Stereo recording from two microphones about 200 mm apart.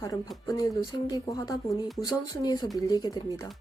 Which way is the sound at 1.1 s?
20° left (ahead or behind).